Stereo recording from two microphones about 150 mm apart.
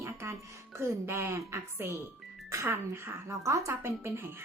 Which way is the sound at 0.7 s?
15° right (ahead or behind).